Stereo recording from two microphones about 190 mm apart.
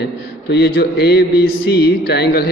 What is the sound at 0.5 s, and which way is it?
A man's voice, 65° left (ahead or behind).